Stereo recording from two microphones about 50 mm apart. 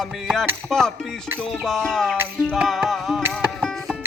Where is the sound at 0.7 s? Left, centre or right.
Centre.